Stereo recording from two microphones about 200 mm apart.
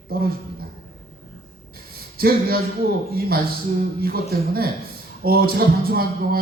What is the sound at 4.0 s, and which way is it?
Speech, 50° right (ahead or behind).